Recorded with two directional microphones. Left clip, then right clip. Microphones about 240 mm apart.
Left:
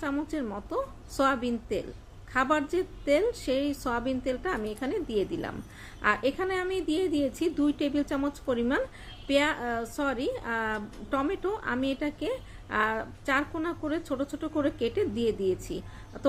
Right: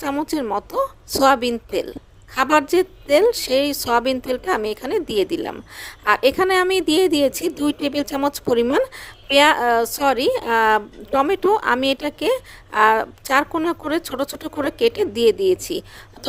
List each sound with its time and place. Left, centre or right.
0.0 s a woman's voice: right